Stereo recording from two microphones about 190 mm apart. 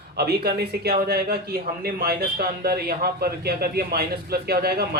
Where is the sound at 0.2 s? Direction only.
55° right (ahead or behind).